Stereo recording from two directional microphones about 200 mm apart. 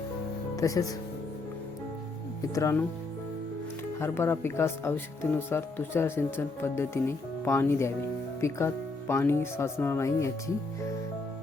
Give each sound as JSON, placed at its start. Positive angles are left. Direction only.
{"t": 0.5, "sound": "speech", "side_deg": 15}
{"t": 2.6, "sound": "speech", "side_deg": 15}
{"t": 4.0, "sound": "speech", "side_deg": 10}